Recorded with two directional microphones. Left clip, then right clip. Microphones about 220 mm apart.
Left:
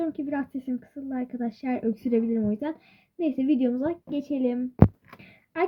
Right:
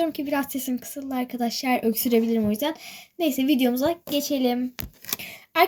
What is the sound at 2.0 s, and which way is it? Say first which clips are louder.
A woman's voice: right 4 dB; 45° right (ahead or behind).